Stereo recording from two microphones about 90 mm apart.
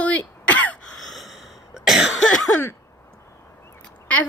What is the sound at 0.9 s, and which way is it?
Cough, 5° left (ahead or behind).